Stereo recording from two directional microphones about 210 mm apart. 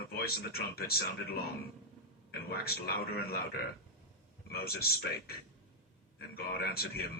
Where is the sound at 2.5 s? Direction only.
45° left (ahead or behind).